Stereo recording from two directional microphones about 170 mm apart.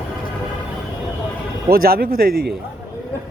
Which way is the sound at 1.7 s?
60° right (ahead or behind).